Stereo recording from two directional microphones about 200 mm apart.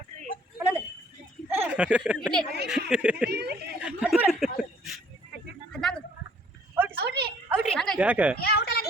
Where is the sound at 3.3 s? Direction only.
55° right (ahead or behind).